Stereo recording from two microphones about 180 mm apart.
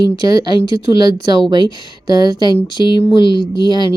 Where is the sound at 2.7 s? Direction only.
25° left (ahead or behind).